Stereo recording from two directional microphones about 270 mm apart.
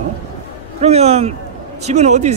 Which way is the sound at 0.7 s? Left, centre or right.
Right.